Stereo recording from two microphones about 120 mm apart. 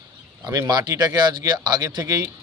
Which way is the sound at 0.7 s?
35° right (ahead or behind).